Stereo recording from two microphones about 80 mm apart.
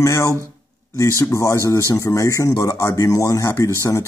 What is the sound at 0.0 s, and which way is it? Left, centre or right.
Speech, left.